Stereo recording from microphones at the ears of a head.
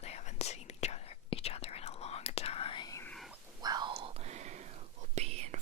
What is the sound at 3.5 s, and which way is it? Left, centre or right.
Whispering, right.